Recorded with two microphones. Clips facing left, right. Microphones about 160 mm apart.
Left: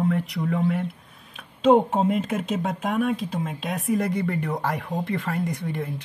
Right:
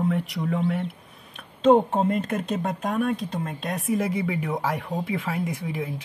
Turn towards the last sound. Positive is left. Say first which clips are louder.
# left 1 dB
turn(degrees=-5)  # may be behind; listen again after turning